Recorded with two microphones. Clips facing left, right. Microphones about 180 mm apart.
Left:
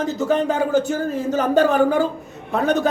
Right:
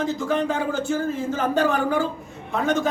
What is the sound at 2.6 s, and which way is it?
Speech, 15° right (ahead or behind).